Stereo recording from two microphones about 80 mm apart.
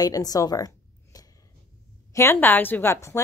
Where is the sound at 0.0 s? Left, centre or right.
Left.